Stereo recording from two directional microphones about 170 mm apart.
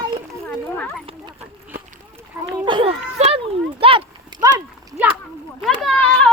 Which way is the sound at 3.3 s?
35° right (ahead or behind).